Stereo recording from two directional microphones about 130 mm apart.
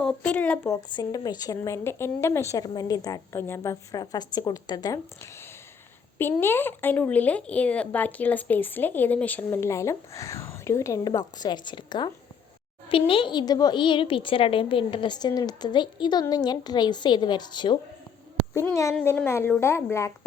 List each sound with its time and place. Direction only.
0.0 s speech: 10° left (ahead or behind)
0.8 s a woman's voice: 35° left (ahead or behind)
18.5 s speech: 25° left (ahead or behind)